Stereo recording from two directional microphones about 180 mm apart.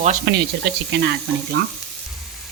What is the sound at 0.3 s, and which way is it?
Speech, 60° right (ahead or behind).